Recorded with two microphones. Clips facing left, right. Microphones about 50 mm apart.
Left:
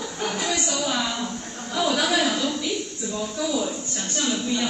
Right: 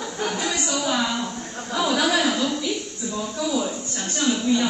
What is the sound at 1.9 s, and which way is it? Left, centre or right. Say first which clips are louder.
Speech: right 1 dB; centre.